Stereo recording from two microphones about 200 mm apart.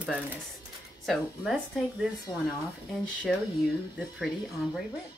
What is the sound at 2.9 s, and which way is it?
Speech, centre (ahead or behind).